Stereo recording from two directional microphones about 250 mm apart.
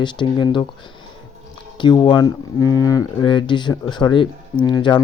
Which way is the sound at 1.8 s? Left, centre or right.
Centre.